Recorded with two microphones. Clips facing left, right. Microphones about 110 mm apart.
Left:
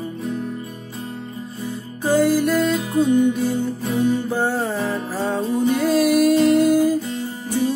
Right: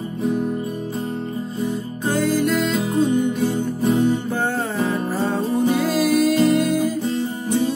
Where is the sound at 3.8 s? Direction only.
25° right (ahead or behind).